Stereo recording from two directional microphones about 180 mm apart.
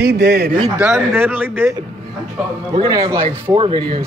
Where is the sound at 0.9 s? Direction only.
10° right (ahead or behind).